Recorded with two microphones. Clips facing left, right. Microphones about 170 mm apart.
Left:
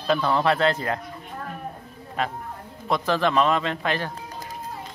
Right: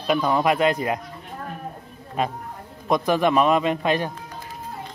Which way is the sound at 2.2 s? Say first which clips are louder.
Right 2 dB; 15° right (ahead or behind).